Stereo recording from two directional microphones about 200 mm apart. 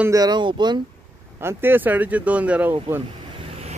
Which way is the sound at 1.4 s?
10° right (ahead or behind).